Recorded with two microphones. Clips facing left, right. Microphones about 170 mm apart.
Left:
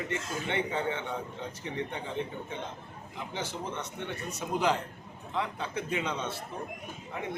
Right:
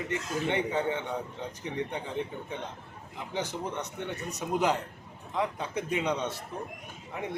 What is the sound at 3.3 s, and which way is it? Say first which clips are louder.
Speech: right 3 dB; 15° right (ahead or behind).